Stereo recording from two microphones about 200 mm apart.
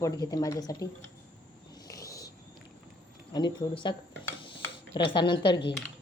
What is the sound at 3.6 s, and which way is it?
Speech, 15° left (ahead or behind).